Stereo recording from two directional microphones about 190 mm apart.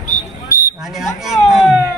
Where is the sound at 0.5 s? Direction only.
55° left (ahead or behind).